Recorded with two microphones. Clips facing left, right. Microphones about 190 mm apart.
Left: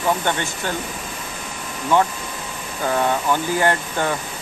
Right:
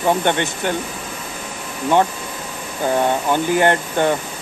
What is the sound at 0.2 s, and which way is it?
Speech, 20° right (ahead or behind).